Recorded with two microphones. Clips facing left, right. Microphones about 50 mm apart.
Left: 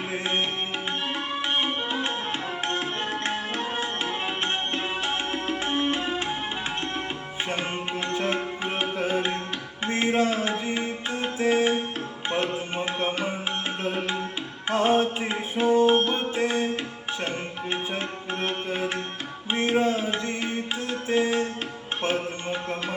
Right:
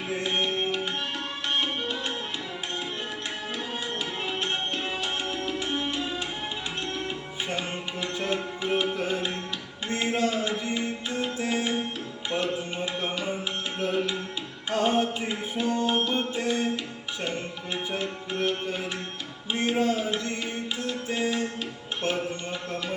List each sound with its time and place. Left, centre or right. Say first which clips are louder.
0.2 s tabla: right 1 dB; left
2.6 s tabla: left 5 dB; left
7.4 s music: left 3 dB; left
13.7 s tabla: right 1 dB; left
14.8 s music: left 3 dB; left